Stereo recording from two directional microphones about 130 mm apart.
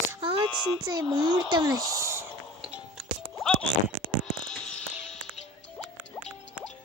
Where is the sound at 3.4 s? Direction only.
5° left (ahead or behind).